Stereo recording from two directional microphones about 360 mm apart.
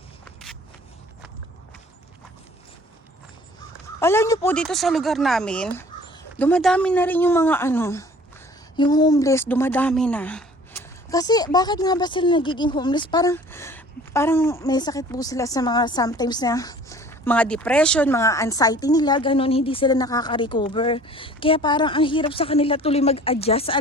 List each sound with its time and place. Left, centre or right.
4.0 s a woman's voice: centre